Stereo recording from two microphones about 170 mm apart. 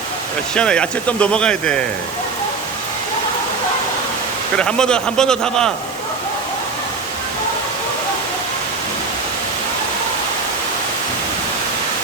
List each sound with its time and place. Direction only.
0.5 s speech: 5° left (ahead or behind)
4.5 s speech: 5° left (ahead or behind)